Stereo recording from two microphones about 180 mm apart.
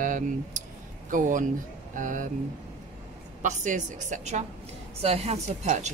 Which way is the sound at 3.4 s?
45° right (ahead or behind).